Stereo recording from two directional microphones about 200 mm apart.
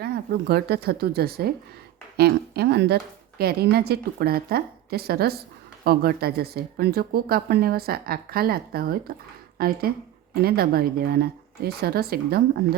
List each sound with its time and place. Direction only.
0.0 s speech: 55° right (ahead or behind)